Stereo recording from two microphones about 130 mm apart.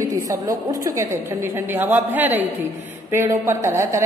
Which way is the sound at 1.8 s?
15° right (ahead or behind).